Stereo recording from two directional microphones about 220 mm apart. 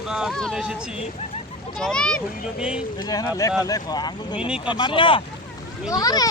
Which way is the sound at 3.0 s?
20° left (ahead or behind).